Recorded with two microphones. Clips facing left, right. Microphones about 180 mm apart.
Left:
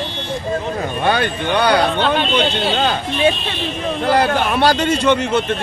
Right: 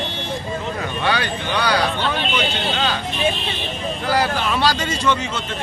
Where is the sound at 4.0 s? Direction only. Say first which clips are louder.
Left 5 dB; 60° left (ahead or behind).